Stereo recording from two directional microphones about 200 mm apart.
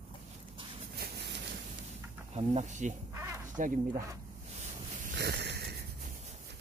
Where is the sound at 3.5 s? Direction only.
40° right (ahead or behind).